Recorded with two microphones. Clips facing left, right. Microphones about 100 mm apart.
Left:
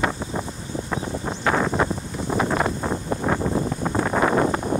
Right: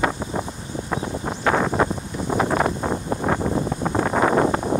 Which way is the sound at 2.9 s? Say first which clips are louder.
Right 1 dB; 15° right (ahead or behind).